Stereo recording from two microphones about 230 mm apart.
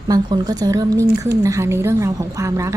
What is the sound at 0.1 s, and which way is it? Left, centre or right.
A woman's voice, centre.